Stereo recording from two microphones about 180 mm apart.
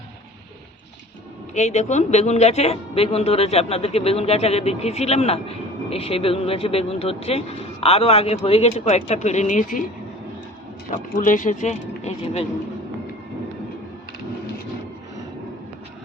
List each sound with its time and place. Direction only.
1.5 s a woman's voice: 40° left (ahead or behind)
10.9 s a woman's voice: 45° left (ahead or behind)